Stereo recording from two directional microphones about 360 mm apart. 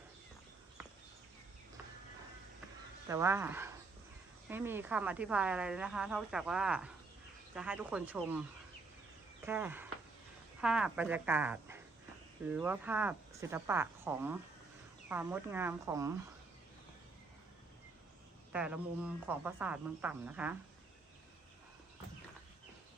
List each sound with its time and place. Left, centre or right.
3.1 s a woman's voice: centre
18.5 s a woman's voice: centre